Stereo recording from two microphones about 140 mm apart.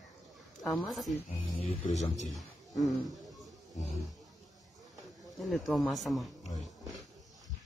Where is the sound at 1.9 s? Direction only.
55° left (ahead or behind).